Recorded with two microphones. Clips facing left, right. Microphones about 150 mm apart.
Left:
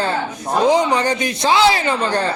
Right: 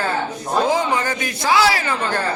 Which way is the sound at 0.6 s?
20° left (ahead or behind).